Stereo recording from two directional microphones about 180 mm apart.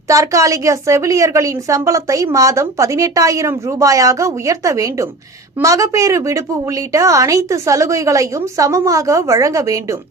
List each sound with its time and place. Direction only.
0.1 s a woman's voice: 20° right (ahead or behind)